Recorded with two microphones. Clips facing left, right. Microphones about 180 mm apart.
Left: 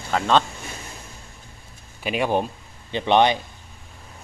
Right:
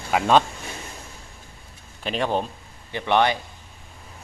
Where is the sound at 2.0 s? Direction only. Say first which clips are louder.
Left 2 dB; 10° left (ahead or behind).